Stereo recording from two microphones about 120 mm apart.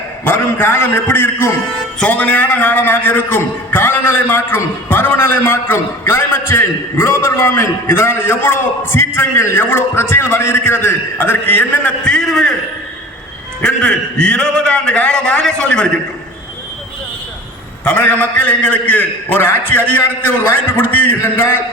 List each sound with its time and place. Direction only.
0.3 s a man's voice: 15° left (ahead or behind)
13.6 s a man's voice: 10° left (ahead or behind)
17.8 s a man's voice: 10° left (ahead or behind)